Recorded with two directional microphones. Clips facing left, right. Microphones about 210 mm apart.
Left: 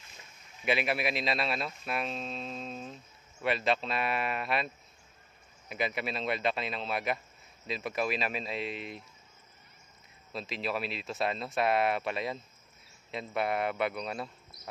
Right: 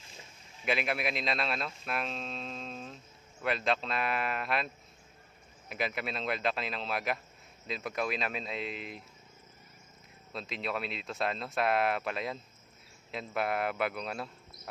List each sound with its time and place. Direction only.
0.0 s boat: 30° right (ahead or behind)
0.7 s speech: centre (ahead or behind)
5.7 s speech: centre (ahead or behind)
10.3 s speech: centre (ahead or behind)